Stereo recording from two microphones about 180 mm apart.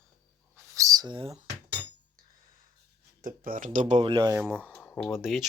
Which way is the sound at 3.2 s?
50° right (ahead or behind).